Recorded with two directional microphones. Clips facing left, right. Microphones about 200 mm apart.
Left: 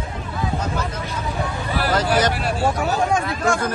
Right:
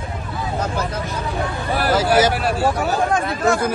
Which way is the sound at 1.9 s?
5° right (ahead or behind).